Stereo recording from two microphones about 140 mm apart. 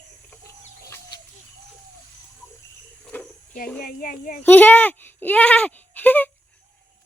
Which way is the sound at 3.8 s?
90° left.